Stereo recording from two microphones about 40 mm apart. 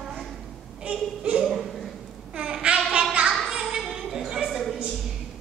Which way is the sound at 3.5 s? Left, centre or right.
Centre.